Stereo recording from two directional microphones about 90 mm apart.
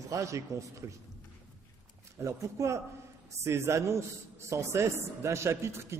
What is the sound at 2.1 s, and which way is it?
A man's voice, 35° right (ahead or behind).